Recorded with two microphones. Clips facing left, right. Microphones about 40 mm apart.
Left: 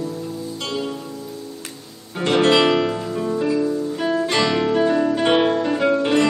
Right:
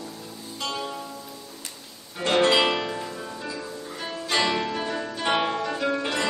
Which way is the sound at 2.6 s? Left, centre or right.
Centre.